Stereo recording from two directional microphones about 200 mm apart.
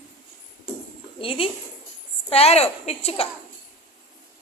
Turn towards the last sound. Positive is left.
turn(degrees=30)  # may be behind; listen again after turning